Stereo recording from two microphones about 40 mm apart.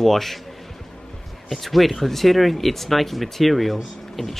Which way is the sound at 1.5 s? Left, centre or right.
Centre.